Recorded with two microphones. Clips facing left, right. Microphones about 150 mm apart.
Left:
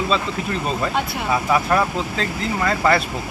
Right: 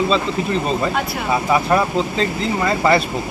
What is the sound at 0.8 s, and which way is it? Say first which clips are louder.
Speech: right 2 dB; 5° right (ahead or behind).